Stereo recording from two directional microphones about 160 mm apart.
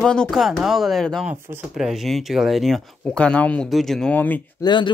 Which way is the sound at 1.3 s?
15° right (ahead or behind).